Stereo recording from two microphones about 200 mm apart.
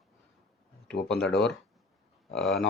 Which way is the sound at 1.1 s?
5° left (ahead or behind).